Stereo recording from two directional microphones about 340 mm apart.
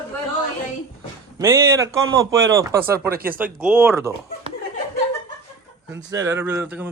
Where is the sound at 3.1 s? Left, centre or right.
Right.